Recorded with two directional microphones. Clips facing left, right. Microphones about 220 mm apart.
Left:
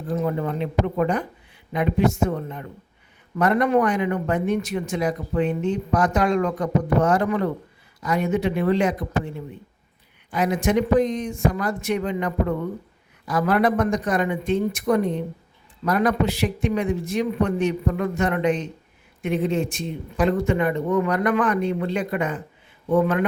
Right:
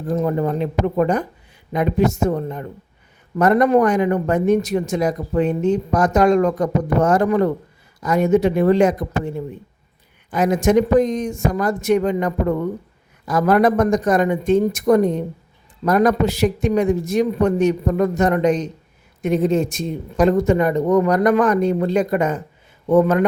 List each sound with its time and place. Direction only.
0.1 s speech: 45° right (ahead or behind)